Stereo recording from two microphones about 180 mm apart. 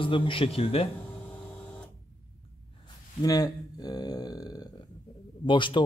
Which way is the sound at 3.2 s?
20° left (ahead or behind).